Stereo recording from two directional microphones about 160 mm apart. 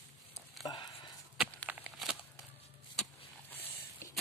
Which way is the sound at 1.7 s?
5° right (ahead or behind).